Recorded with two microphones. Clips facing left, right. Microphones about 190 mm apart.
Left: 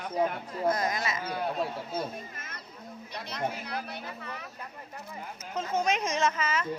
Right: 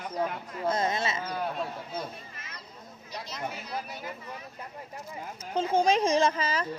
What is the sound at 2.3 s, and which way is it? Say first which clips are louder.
Children playing: left 2 dB; 50° left (ahead or behind).